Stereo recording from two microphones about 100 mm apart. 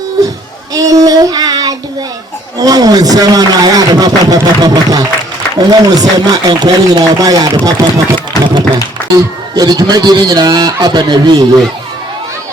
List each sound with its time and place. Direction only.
0.7 s child singing: 35° right (ahead or behind)
2.6 s a man's voice: 40° right (ahead or behind)
8.4 s speech: 40° left (ahead or behind)
9.1 s speech: 40° right (ahead or behind)